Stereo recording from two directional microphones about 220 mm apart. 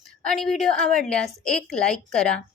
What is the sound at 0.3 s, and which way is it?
A child's voice, centre (ahead or behind).